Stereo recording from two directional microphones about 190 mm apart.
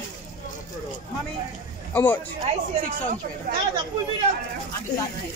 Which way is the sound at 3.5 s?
45° right (ahead or behind).